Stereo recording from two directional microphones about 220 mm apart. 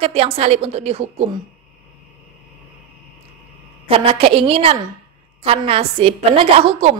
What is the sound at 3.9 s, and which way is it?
A woman's voice, 25° right (ahead or behind).